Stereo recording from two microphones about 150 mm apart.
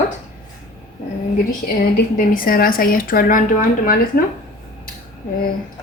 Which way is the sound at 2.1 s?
70° left (ahead or behind).